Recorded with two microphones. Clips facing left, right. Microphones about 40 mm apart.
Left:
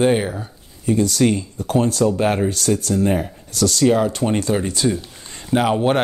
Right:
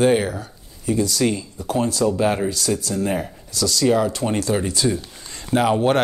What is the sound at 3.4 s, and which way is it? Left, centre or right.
Speech, left.